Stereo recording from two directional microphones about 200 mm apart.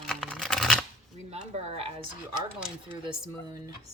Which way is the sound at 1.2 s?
35° right (ahead or behind).